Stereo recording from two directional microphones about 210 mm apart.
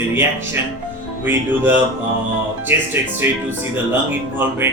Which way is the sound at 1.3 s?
10° right (ahead or behind).